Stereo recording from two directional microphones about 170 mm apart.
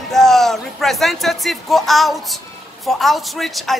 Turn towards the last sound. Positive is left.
turn(degrees=0)  # may be behind; listen again after turning